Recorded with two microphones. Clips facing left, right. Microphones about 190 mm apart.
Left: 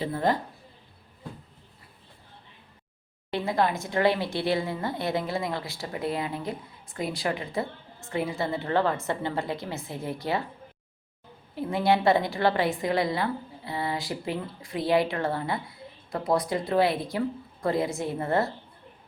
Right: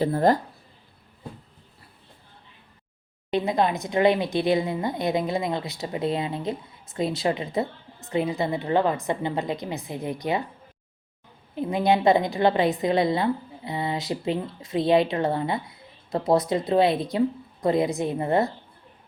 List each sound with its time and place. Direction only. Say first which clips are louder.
0.0 s speech: right 6 dB; 40° right (ahead or behind)
3.2 s speech: right 3 dB; 20° right (ahead or behind)
11.5 s speech: right 2 dB; 20° right (ahead or behind)